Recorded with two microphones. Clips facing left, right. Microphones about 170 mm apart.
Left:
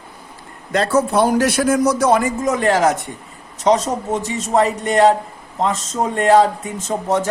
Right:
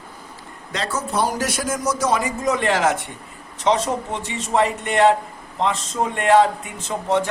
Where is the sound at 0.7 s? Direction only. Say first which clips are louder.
Left 9 dB; 55° left (ahead or behind).